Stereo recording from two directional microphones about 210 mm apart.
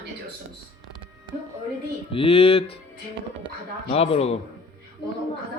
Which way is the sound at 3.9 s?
25° left (ahead or behind).